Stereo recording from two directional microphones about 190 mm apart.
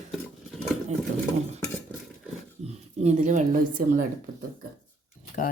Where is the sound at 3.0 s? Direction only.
40° right (ahead or behind).